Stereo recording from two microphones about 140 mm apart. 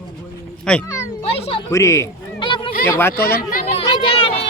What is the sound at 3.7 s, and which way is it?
Children playing, 45° left (ahead or behind).